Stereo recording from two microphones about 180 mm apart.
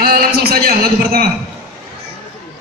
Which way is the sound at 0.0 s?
60° right (ahead or behind).